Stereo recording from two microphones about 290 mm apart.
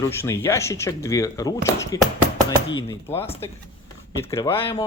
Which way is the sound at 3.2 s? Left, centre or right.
Centre.